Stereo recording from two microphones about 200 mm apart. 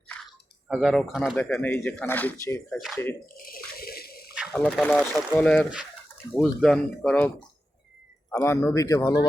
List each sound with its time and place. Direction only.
0.7 s speech: centre (ahead or behind)
3.3 s water: 45° left (ahead or behind)
4.4 s speech: 5° left (ahead or behind)
8.3 s speech: 15° left (ahead or behind)